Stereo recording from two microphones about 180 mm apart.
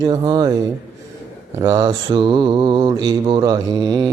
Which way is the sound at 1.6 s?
20° right (ahead or behind).